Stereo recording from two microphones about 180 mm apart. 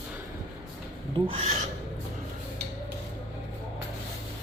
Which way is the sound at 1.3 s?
30° right (ahead or behind).